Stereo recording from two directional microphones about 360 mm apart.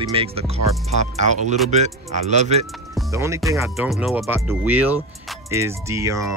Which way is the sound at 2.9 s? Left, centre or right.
Centre.